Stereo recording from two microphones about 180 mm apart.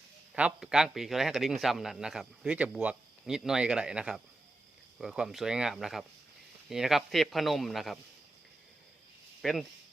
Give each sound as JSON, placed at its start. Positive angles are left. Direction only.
{"t": 0.3, "sound": "speech", "side_deg": -5}
{"t": 9.4, "sound": "speech", "side_deg": 0}